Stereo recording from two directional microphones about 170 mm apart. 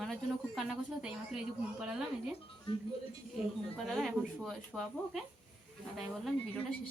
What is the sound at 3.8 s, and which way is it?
A woman's voice, centre (ahead or behind).